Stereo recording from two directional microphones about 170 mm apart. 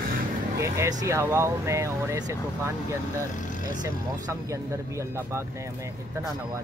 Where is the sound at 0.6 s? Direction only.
20° right (ahead or behind).